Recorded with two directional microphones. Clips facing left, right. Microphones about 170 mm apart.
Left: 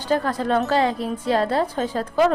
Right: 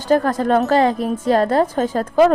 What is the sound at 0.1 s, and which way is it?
Speech, 45° right (ahead or behind).